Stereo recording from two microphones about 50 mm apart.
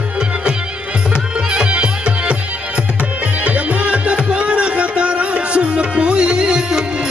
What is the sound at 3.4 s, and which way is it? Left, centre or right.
Music, right.